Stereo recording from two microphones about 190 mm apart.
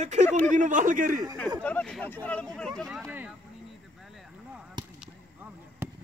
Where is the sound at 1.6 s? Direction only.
5° left (ahead or behind).